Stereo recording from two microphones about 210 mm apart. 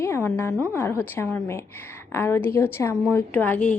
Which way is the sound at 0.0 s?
10° left (ahead or behind).